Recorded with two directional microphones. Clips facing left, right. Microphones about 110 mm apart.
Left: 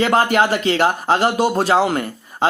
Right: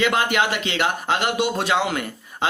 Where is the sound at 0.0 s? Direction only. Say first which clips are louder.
Left 5 dB; 40° left (ahead or behind).